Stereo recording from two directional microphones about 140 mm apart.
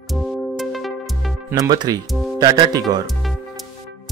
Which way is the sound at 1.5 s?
30° right (ahead or behind).